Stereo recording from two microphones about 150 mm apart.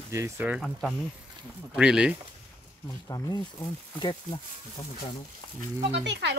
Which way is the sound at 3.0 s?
25° left (ahead or behind).